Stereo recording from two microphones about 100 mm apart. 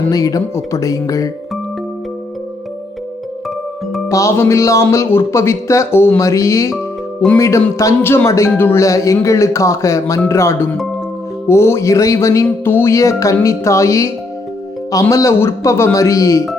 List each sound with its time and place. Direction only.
0.1 s music: 35° left (ahead or behind)
4.1 s music: 30° left (ahead or behind)
7.3 s speech: 30° left (ahead or behind)
7.8 s music: 25° left (ahead or behind)
10.2 s speech: 30° left (ahead or behind)
11.4 s music: 25° left (ahead or behind)
15.1 s music: 30° left (ahead or behind)